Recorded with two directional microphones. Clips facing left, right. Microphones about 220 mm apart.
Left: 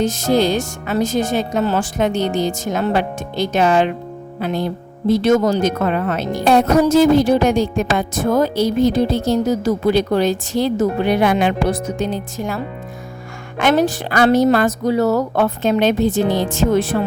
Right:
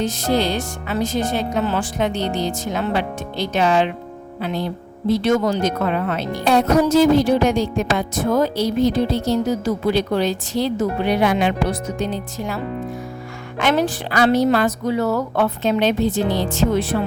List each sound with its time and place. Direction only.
0.0 s a woman's voice: 45° left (ahead or behind)
13.6 s a woman's voice: 45° left (ahead or behind)